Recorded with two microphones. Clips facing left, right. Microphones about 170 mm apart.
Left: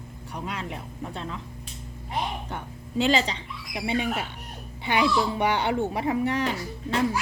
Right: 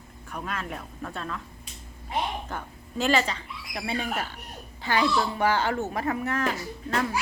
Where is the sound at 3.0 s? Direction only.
20° left (ahead or behind).